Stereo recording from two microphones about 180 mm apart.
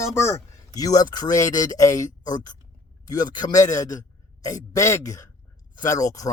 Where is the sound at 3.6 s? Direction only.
45° left (ahead or behind).